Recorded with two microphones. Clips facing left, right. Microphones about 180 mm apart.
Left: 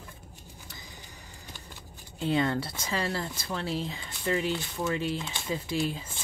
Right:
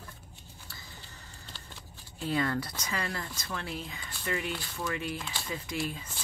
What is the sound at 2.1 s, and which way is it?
Speech, 25° left (ahead or behind).